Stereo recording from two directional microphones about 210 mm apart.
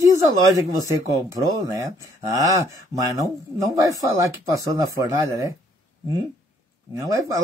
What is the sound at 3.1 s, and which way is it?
Speech, 15° right (ahead or behind).